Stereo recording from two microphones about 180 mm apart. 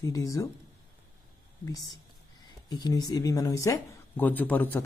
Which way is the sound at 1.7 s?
20° left (ahead or behind).